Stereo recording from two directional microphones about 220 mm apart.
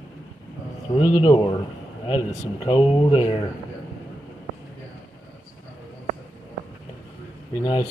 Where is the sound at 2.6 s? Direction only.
25° left (ahead or behind).